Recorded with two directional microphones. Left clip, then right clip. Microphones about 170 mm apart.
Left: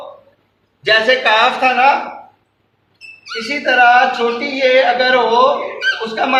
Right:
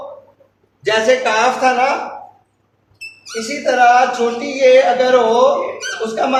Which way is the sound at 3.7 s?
10° right (ahead or behind).